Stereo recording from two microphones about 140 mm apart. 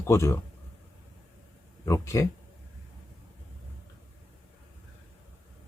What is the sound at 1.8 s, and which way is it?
Speech, 25° left (ahead or behind).